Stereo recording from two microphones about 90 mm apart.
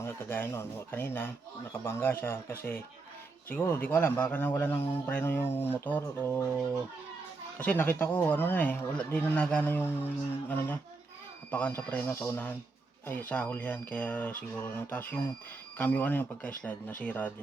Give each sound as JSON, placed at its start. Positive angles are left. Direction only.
{"t": 0.0, "sound": "speech", "side_deg": 25}
{"t": 7.6, "sound": "speech", "side_deg": 20}
{"t": 11.5, "sound": "speech", "side_deg": 20}